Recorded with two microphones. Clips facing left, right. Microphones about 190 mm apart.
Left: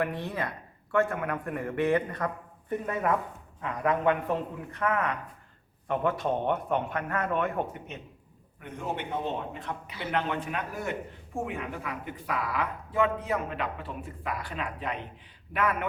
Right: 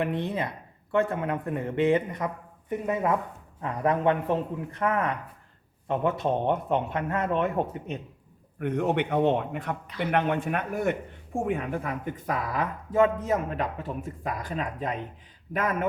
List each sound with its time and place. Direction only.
0.0 s speech: 20° right (ahead or behind)
3.6 s speech: 30° right (ahead or behind)
8.5 s a man's voice: 65° right (ahead or behind); by 15.9 s 40° right (ahead or behind)